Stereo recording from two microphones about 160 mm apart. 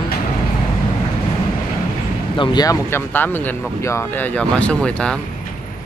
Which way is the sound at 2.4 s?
30° left (ahead or behind).